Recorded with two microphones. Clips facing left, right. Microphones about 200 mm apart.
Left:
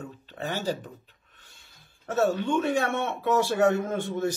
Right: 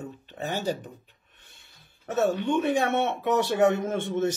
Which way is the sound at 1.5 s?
20° right (ahead or behind).